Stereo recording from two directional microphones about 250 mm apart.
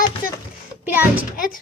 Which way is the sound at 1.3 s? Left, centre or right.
Left.